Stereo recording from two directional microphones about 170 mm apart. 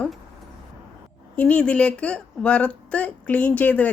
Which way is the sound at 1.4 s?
10° left (ahead or behind).